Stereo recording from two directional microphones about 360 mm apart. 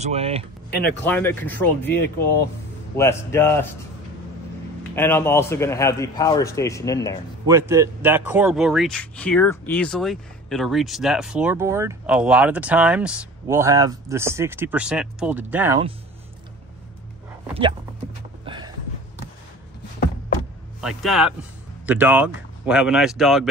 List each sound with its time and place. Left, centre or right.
0.0 s speech: centre
1.0 s speech: centre
3.0 s speech: centre
4.9 s speech: centre
7.4 s speech: centre
18.4 s a sound: centre
20.8 s speech: centre